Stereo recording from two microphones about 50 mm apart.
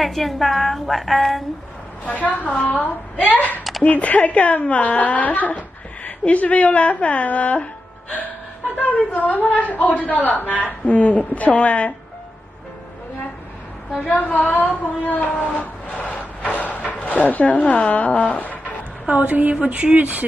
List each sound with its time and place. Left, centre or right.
0.0 s a woman's voice: centre
2.0 s a woman's voice: left
8.7 s a woman's voice: left
14.0 s a woman's voice: left
16.0 s a sound: left
16.5 s speech: left
19.0 s speech: right